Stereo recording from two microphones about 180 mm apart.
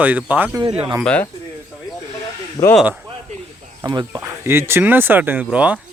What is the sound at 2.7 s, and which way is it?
Speech, centre (ahead or behind).